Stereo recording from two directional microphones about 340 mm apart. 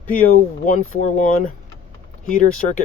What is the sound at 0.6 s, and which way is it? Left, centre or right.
Speech, left.